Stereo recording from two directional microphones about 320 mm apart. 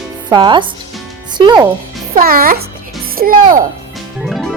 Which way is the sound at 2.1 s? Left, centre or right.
Right.